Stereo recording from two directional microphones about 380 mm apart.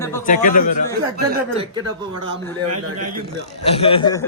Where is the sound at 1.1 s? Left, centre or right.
Right.